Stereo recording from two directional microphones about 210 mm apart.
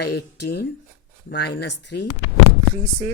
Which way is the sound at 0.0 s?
50° left (ahead or behind).